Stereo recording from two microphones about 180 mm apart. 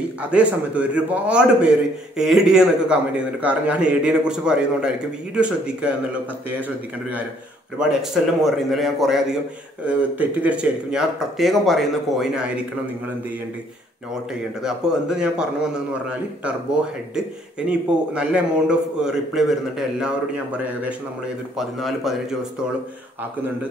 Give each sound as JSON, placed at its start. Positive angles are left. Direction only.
{"t": 0.2, "sound": "a man's voice", "side_deg": -5}
{"t": 7.8, "sound": "a man's voice", "side_deg": 0}
{"t": 14.6, "sound": "a man's voice", "side_deg": -5}
{"t": 17.1, "sound": "a man's voice", "side_deg": -5}